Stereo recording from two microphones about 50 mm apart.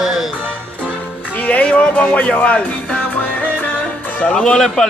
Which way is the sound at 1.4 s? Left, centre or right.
Left.